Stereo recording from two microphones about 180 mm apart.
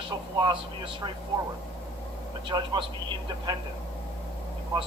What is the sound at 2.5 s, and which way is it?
Speech, 20° right (ahead or behind).